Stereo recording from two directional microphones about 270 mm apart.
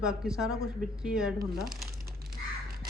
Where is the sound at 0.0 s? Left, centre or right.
Centre.